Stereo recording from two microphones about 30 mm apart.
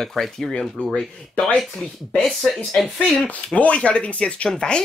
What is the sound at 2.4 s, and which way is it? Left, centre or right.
Speech, centre.